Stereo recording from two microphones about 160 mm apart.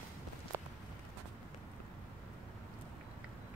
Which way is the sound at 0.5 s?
15° right (ahead or behind).